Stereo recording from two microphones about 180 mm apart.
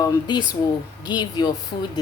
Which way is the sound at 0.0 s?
25° left (ahead or behind).